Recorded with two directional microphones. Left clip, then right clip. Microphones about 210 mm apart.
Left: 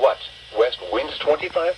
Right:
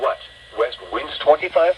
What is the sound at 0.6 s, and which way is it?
Speech, 10° right (ahead or behind).